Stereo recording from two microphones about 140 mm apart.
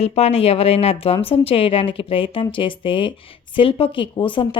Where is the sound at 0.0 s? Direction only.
50° left (ahead or behind).